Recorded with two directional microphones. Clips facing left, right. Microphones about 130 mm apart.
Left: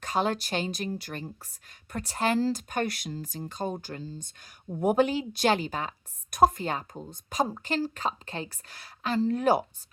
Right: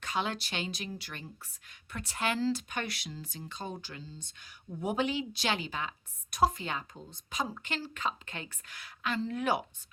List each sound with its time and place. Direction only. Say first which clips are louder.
0.0 s speech: left 6 dB; 40° left (ahead or behind)